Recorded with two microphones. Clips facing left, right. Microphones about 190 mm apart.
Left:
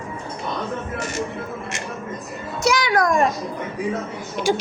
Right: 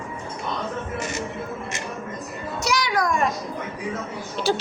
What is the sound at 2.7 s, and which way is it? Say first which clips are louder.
Music: left 5 dB; 55° left (ahead or behind).